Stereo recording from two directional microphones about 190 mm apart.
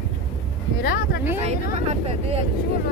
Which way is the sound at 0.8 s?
55° left (ahead or behind).